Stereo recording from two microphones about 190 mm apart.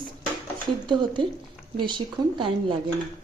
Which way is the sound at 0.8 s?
25° right (ahead or behind).